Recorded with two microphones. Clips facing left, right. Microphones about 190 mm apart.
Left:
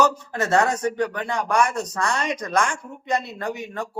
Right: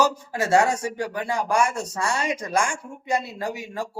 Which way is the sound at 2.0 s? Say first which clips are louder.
Even; 10° right (ahead or behind).